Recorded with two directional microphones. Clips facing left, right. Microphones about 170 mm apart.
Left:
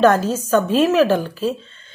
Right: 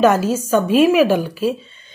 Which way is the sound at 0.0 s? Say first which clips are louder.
Even; 10° right (ahead or behind).